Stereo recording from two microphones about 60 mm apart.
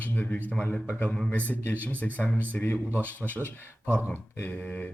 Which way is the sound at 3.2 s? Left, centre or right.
Centre.